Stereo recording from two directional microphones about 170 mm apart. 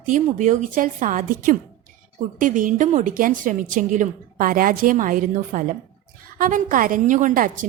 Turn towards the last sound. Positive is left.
turn(degrees=-50)  # may be behind; listen again after turning